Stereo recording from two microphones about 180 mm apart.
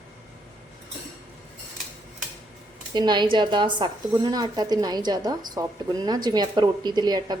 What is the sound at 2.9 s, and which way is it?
A woman's voice, 25° right (ahead or behind).